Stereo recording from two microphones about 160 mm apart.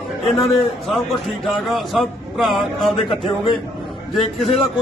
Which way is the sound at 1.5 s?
Centre (ahead or behind).